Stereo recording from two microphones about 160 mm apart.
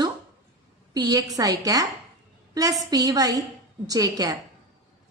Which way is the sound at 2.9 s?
25° right (ahead or behind).